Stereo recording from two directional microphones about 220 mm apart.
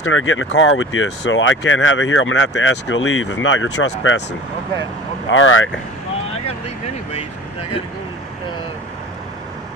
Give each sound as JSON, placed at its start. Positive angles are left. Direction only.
{"t": 0.0, "sound": "speech", "side_deg": 65}